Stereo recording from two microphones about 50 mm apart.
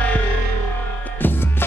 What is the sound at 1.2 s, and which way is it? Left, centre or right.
Music, left.